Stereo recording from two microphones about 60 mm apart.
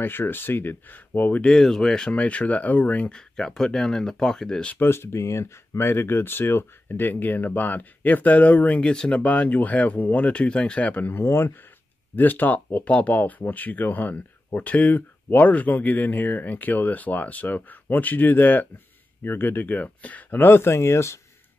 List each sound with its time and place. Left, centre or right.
0.0 s speech: left
1.4 s speech: centre; by 3.2 s left
3.2 s speech: centre
4.7 s speech: left
11.0 s speech: left
11.2 s speech: left
12.2 s speech: left